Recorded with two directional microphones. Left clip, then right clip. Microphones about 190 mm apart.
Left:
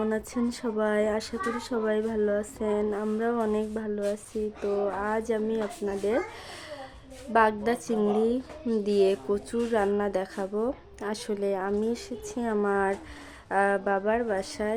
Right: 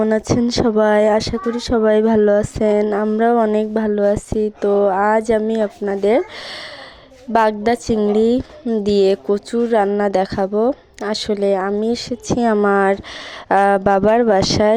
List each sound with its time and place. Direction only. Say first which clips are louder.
0.0 s a woman's voice: right 13 dB; 40° right (ahead or behind)